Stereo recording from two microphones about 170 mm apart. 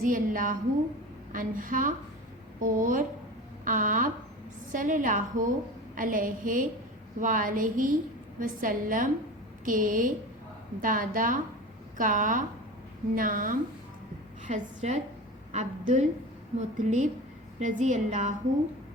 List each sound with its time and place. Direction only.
0.0 s a woman's voice: 55° right (ahead or behind)